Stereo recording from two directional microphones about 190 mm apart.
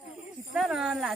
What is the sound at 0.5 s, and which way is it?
Speech, centre (ahead or behind).